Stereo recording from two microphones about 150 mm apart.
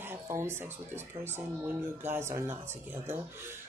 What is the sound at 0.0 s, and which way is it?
Speech, 15° right (ahead or behind).